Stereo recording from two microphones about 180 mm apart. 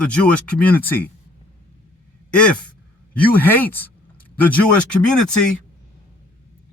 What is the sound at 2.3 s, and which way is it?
A man's voice, 5° left (ahead or behind).